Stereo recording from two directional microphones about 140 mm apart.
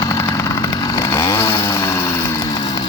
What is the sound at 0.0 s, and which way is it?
Chainsaw, 20° left (ahead or behind).